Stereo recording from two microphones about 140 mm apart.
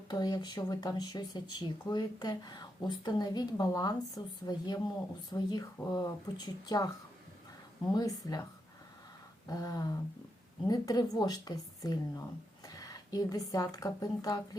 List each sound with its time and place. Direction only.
0.1 s speech: 30° left (ahead or behind)
7.9 s speech: 25° left (ahead or behind)
9.5 s speech: 30° left (ahead or behind)